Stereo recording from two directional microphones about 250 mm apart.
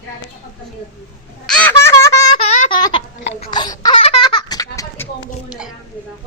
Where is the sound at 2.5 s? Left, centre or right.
Left.